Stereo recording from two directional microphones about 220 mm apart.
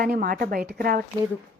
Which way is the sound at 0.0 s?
40° right (ahead or behind).